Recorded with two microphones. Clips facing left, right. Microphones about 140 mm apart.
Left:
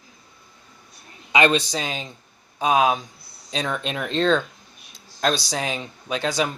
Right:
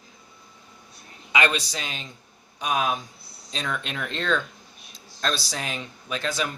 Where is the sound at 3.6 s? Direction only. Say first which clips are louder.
Left 4 dB; 25° left (ahead or behind).